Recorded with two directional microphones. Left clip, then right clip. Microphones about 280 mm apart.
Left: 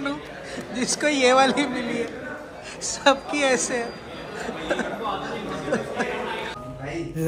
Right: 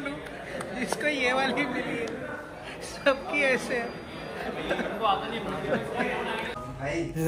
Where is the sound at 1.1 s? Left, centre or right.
Centre.